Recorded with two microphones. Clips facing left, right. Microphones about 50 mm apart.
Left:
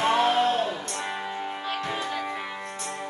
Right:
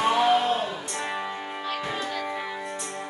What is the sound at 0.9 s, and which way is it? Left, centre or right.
Music, centre.